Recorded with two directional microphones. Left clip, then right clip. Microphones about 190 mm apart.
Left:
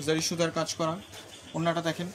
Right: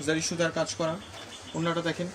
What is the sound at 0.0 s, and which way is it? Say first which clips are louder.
Speech: even; 60° left (ahead or behind).